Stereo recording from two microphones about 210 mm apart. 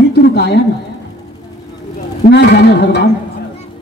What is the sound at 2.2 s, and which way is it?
Speech, 50° left (ahead or behind).